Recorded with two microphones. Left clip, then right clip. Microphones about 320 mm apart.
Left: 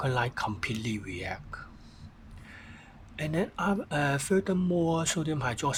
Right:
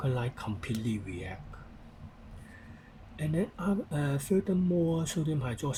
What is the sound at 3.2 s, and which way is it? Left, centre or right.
Speech, left.